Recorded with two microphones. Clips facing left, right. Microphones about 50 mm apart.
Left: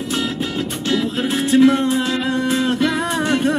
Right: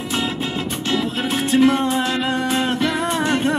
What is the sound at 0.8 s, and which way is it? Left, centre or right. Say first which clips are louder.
Music: left 2 dB; right.